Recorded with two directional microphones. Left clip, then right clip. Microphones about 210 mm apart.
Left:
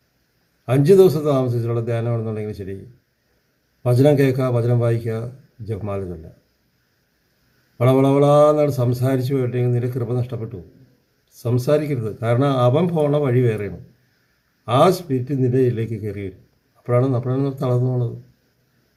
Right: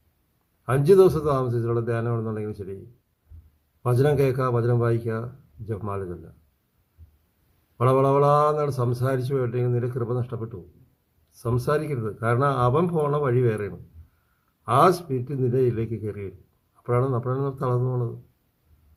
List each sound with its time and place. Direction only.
0.9 s a man's voice: centre (ahead or behind)
3.9 s a man's voice: centre (ahead or behind)
7.8 s a man's voice: centre (ahead or behind)